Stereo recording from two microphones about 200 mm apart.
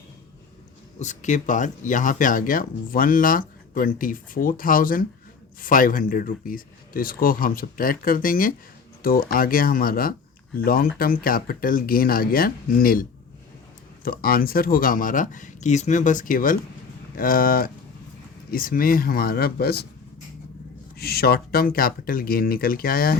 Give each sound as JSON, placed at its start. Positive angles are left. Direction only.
{"t": 0.9, "sound": "speech", "side_deg": 35}
{"t": 20.9, "sound": "speech", "side_deg": 50}